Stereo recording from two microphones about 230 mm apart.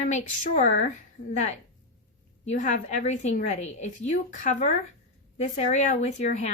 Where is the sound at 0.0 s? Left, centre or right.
Left.